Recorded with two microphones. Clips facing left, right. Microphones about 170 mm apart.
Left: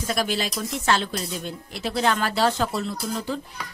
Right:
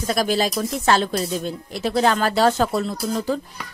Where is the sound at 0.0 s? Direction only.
40° right (ahead or behind).